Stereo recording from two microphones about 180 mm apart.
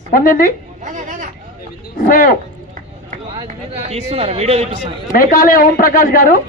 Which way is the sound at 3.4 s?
35° right (ahead or behind).